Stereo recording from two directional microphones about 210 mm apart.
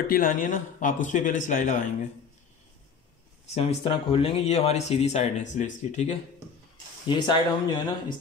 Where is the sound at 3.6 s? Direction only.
25° left (ahead or behind).